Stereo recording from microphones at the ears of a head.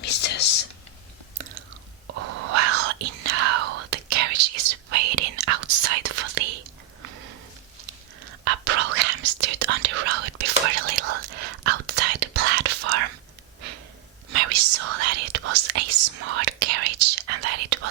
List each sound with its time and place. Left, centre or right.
0.0 s whispering: left
2.0 s whispering: right
14.3 s whispering: right